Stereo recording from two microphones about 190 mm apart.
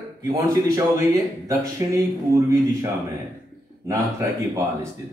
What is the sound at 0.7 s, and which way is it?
Speech, 15° right (ahead or behind).